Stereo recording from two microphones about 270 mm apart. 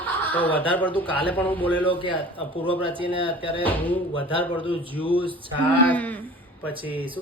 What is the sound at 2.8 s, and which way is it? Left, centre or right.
Speech, centre.